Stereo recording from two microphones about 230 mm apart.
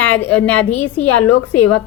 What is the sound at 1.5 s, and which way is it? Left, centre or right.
Speech, left.